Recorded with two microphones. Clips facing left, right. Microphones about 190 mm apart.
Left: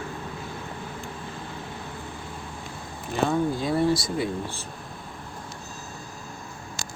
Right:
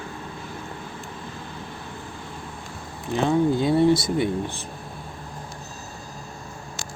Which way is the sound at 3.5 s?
25° right (ahead or behind).